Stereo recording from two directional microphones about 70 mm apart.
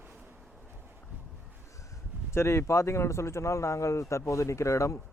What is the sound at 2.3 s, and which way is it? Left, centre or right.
Speech, left.